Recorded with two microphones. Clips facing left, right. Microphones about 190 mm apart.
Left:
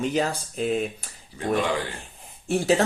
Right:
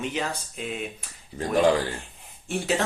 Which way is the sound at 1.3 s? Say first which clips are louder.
Right 3 dB; 40° right (ahead or behind).